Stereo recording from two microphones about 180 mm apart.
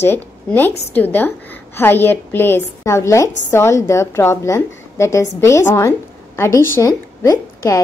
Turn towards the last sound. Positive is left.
turn(degrees=15)  # may be behind; listen again after turning